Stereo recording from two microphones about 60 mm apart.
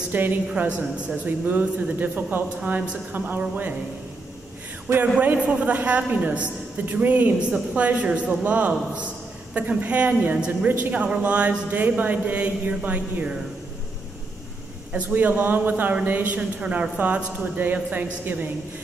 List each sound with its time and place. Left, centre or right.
0.1 s a woman's voice: right
0.5 s a man's voice: centre
5.0 s a man's voice: right
14.9 s a man's voice: right
17.9 s a woman's voice: right